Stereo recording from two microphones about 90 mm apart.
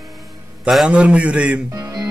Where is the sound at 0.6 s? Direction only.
5° right (ahead or behind).